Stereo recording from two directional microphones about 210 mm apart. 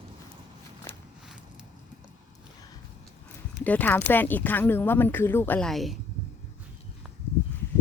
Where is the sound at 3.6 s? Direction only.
10° left (ahead or behind).